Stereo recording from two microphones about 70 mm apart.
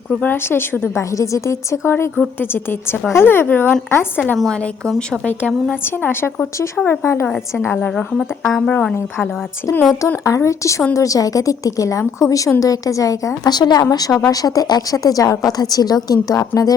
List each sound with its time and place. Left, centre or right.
0.2 s speech: left
1.1 s a woman's voice: left
1.9 s speech: left
6.0 s speech: left
8.6 s a woman's voice: centre
10.2 s a woman's voice: left
13.5 s speech: left
13.9 s a woman's voice: left